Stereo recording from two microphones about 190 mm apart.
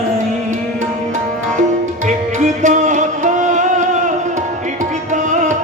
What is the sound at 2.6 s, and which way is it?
Music, 40° right (ahead or behind).